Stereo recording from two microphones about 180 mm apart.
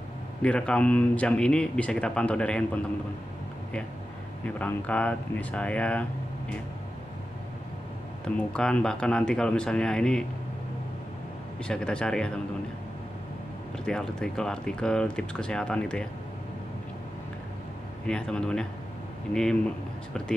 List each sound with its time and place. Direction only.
0.4 s speech: 5° left (ahead or behind)
4.6 s speech: 10° left (ahead or behind)
8.4 s speech: 5° left (ahead or behind)
11.6 s speech: 5° left (ahead or behind)
13.8 s speech: 5° left (ahead or behind)
18.0 s speech: 5° left (ahead or behind)